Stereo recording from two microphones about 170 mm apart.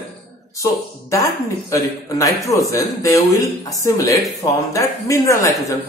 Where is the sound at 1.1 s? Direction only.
20° left (ahead or behind).